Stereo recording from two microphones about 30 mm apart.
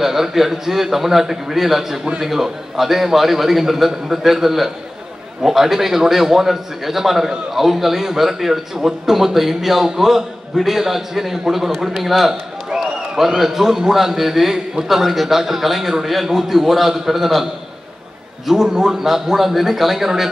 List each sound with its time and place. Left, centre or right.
0.0 s a man's voice: centre
18.5 s a man's voice: centre